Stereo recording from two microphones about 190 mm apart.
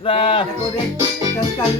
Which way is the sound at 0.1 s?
30° left (ahead or behind).